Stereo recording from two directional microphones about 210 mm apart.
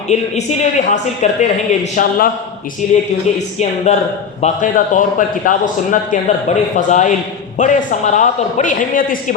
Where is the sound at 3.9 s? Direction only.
35° left (ahead or behind).